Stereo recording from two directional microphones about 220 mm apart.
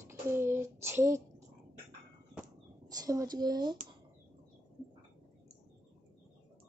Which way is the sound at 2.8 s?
15° right (ahead or behind).